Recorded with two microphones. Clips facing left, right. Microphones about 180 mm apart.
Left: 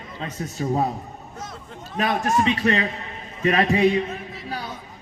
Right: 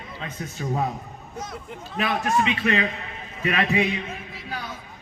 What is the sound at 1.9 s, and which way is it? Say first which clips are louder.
A man's voice: left 2 dB; 45° left (ahead or behind).